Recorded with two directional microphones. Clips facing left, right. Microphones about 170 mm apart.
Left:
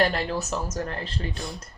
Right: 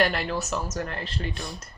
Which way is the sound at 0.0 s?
35° left (ahead or behind).